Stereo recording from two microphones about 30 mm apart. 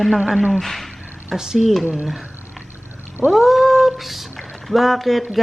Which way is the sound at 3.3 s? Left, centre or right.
Centre.